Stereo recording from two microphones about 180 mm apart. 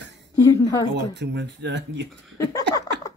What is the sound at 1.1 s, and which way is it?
Speech, 75° right (ahead or behind).